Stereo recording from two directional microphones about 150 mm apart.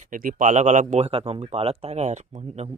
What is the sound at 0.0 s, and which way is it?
Speech, 65° right (ahead or behind).